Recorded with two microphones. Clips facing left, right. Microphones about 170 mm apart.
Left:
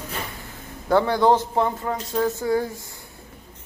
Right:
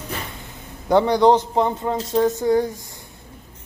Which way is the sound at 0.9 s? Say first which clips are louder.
Right 3 dB; 15° right (ahead or behind).